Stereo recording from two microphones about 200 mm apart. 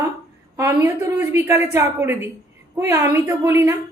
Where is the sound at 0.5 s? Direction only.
15° right (ahead or behind).